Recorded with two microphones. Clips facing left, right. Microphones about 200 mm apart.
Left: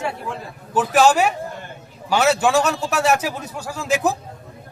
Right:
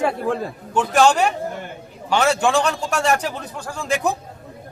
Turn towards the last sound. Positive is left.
turn(degrees=5)  # may be behind; listen again after turning